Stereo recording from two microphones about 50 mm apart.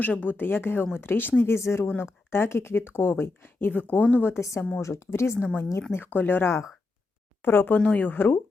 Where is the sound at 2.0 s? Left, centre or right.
Left.